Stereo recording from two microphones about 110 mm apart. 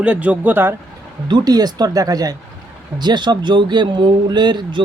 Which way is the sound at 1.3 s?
35° right (ahead or behind).